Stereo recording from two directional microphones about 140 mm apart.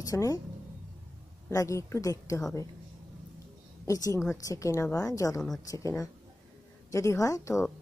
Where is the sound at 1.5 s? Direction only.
20° left (ahead or behind).